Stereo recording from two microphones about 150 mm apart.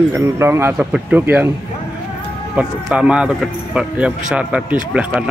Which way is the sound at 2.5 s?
5° right (ahead or behind).